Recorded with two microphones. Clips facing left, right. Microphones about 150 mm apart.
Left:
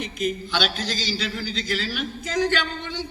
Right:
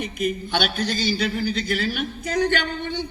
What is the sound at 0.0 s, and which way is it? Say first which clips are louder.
A man's voice: right 1 dB; 55° right (ahead or behind).